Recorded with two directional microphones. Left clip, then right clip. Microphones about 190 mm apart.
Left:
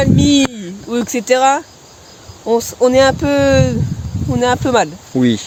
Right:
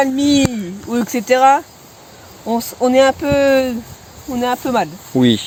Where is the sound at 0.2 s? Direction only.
15° left (ahead or behind).